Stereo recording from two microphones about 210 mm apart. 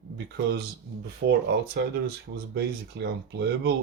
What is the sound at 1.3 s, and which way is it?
Speech, 50° right (ahead or behind).